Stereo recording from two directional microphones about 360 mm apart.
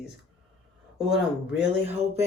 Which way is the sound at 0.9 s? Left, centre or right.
Centre.